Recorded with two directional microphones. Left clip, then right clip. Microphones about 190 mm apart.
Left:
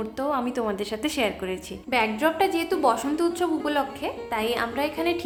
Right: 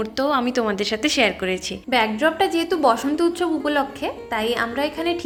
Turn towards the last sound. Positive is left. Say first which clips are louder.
# right 3 dB
turn(degrees=-10)  # may be behind; listen again after turning